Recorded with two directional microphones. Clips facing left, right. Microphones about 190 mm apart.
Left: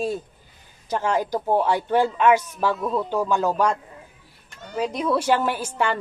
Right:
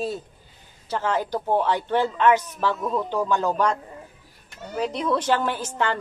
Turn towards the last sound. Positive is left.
turn(degrees=10)  # may be behind; listen again after turning